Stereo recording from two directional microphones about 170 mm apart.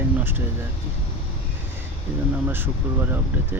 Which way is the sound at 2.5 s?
10° right (ahead or behind).